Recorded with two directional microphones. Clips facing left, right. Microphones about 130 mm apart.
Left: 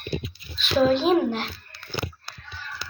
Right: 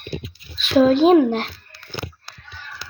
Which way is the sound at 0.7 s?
50° right (ahead or behind).